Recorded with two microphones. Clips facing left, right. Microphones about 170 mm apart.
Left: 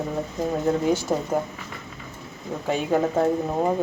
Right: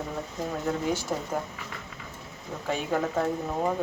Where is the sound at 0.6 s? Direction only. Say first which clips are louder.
Left 6 dB; 25° left (ahead or behind).